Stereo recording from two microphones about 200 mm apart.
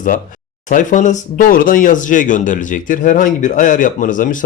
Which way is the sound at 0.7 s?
40° left (ahead or behind).